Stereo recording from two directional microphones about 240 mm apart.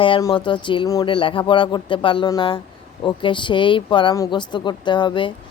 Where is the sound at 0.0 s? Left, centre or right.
Centre.